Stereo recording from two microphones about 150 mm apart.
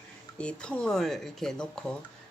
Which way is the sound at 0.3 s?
5° left (ahead or behind).